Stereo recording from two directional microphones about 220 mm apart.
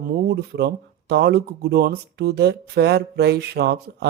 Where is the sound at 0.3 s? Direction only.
50° right (ahead or behind).